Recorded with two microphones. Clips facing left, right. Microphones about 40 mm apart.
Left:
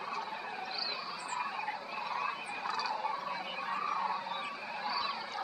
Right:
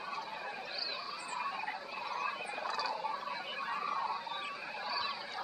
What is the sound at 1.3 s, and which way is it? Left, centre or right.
Frog, centre.